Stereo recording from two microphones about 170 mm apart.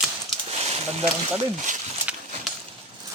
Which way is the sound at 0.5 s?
35° right (ahead or behind).